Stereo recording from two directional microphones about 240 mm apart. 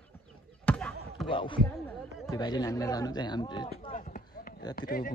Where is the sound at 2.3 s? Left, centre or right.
Centre.